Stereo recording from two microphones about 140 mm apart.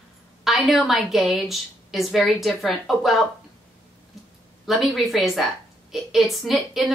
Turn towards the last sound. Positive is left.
turn(degrees=0)  # may be behind; listen again after turning